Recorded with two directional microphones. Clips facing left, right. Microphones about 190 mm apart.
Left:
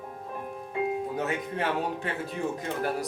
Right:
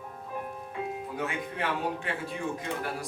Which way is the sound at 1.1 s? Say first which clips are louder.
Left 3 dB; 40° left (ahead or behind).